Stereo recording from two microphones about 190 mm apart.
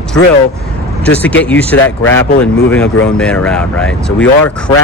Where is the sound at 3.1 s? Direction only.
5° left (ahead or behind).